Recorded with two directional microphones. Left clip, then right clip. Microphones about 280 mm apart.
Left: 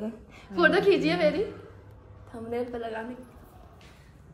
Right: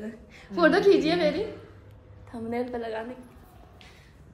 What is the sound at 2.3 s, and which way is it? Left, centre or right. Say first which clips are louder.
Speech: right 1 dB; right.